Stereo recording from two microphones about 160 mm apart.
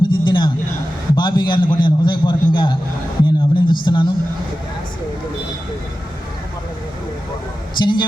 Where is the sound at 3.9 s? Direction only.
25° left (ahead or behind).